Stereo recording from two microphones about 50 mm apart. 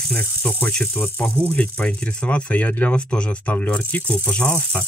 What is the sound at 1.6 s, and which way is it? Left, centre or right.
Speech, left.